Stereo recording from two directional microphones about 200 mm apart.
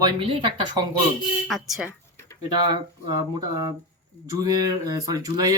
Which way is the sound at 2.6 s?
20° right (ahead or behind).